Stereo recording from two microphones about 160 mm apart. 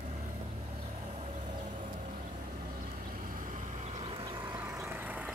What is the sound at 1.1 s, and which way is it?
Vehicle, 45° right (ahead or behind).